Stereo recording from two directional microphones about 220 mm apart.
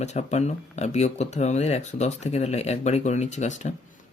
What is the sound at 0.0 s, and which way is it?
Speech, 30° left (ahead or behind).